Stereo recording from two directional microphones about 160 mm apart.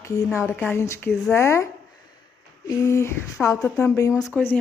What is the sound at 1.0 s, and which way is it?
Speech, centre (ahead or behind).